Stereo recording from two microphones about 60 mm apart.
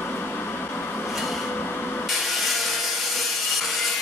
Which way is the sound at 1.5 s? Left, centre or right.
Left.